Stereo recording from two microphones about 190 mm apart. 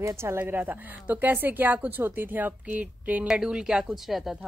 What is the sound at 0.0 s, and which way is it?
A woman's voice, 15° right (ahead or behind).